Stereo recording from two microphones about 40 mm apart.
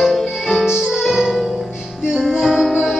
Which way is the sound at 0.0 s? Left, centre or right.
Centre.